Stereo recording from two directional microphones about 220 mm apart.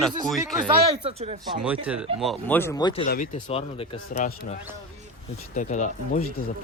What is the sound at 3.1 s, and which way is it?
Speech, 35° left (ahead or behind).